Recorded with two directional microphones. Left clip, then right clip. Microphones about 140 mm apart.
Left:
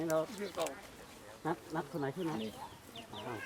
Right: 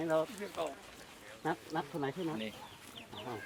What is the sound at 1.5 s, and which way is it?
Speech, 30° right (ahead or behind).